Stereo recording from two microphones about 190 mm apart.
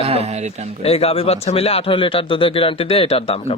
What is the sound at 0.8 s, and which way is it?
Speech, 30° left (ahead or behind).